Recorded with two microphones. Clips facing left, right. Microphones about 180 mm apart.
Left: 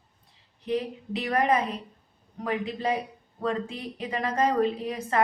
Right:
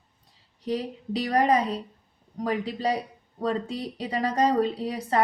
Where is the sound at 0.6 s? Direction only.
35° right (ahead or behind).